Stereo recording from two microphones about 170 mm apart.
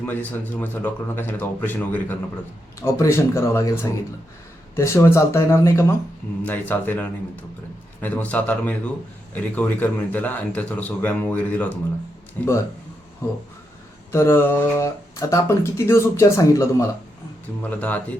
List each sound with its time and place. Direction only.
0.0 s speech: 10° left (ahead or behind)
14.1 s speech: 15° left (ahead or behind)